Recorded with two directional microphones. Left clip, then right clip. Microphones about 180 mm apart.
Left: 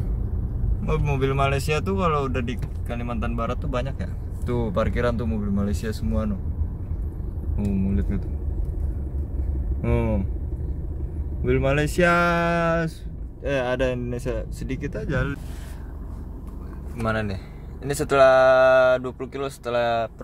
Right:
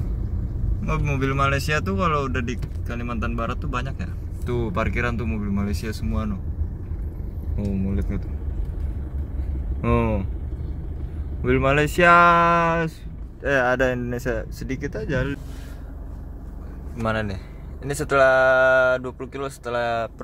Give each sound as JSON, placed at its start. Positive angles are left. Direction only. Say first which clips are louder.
{"t": 0.8, "sound": "speech", "louder": "left 1 dB", "side_deg": 10}
{"t": 4.5, "sound": "speech", "louder": "left 1 dB", "side_deg": -15}
{"t": 7.5, "sound": "speech", "louder": "left 1 dB", "side_deg": -5}
{"t": 9.8, "sound": "speech", "louder": "right 3 dB", "side_deg": 0}
{"t": 11.4, "sound": "speech", "louder": "right 3 dB", "side_deg": 0}
{"t": 13.5, "sound": "speech", "louder": "right 4 dB", "side_deg": -5}
{"t": 17.0, "sound": "speech", "louder": "right 1 dB", "side_deg": -10}
{"t": 17.8, "sound": "speech", "louder": "left 1 dB", "side_deg": 0}